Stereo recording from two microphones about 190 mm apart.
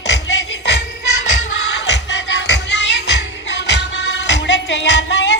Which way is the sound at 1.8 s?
65° left (ahead or behind).